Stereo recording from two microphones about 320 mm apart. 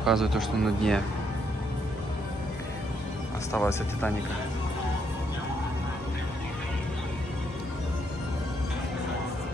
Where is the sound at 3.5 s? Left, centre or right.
Centre.